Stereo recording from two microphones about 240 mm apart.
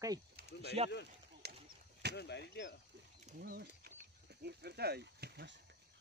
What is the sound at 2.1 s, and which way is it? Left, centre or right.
Speech, left.